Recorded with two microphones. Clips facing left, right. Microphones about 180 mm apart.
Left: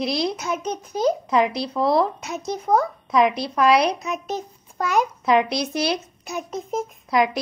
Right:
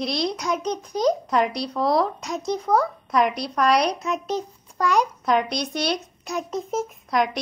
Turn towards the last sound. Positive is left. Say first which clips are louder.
# left 2 dB
turn(degrees=0)  # may be behind; listen again after turning